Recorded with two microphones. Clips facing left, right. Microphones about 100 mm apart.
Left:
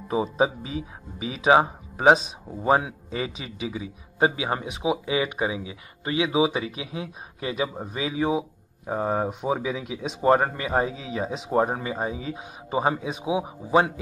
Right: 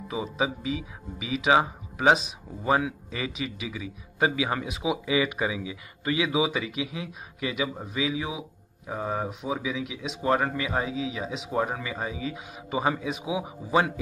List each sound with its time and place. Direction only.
0.1 s speech: 40° left (ahead or behind)